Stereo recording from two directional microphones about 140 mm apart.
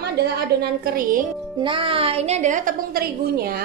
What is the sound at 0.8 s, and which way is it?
Speech, 85° right.